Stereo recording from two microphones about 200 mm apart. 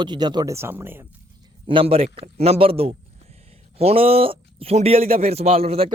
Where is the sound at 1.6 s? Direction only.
25° right (ahead or behind).